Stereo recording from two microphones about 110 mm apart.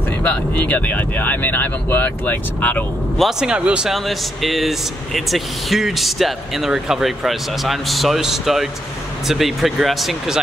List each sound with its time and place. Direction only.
0.2 s speech: 15° left (ahead or behind)
3.2 s speech: 5° right (ahead or behind)